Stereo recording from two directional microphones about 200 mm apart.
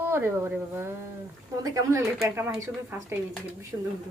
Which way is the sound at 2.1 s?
5° right (ahead or behind).